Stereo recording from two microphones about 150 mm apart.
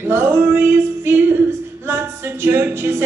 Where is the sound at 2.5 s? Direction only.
15° right (ahead or behind).